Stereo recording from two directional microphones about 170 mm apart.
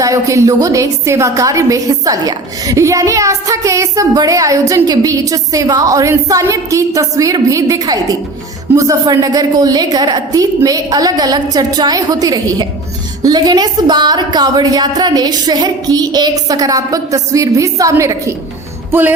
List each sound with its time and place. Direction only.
0.0 s a woman's voice: 20° right (ahead or behind)